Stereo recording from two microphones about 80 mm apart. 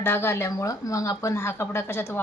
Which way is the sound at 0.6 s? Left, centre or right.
Left.